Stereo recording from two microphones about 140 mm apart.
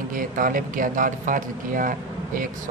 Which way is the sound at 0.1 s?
80° right.